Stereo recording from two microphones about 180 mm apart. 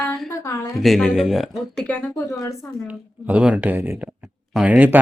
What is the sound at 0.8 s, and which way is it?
Speech, centre (ahead or behind).